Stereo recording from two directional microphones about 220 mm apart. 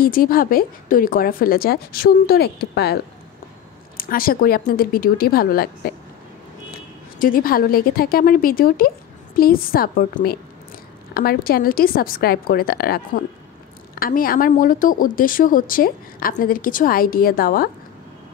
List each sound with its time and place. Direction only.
0.0 s a woman's voice: 40° left (ahead or behind)
7.2 s a woman's voice: 40° left (ahead or behind)